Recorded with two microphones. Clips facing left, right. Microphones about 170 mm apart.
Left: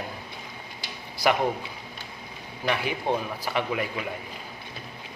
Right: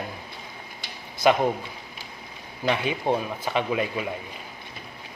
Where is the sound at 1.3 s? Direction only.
20° right (ahead or behind).